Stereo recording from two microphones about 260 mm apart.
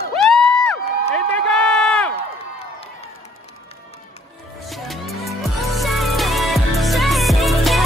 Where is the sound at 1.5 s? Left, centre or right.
Centre.